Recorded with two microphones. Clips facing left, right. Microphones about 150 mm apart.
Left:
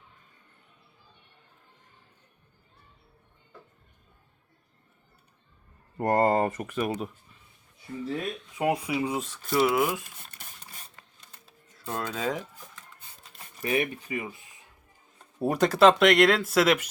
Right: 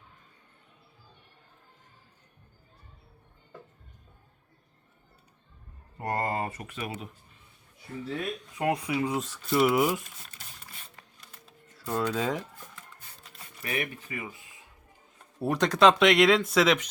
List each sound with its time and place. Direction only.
6.0 s speech: 50° left (ahead or behind)
8.5 s speech: 10° left (ahead or behind)
9.7 s speech: 15° right (ahead or behind)
11.7 s speech: centre (ahead or behind)
13.6 s speech: 30° left (ahead or behind)
15.4 s speech: 10° left (ahead or behind)